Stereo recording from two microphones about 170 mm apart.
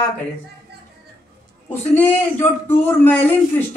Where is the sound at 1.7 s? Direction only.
10° left (ahead or behind).